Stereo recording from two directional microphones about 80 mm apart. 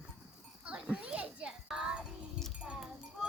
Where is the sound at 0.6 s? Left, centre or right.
Centre.